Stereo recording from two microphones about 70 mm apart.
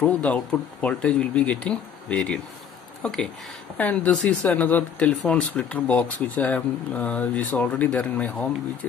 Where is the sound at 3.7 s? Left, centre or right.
Left.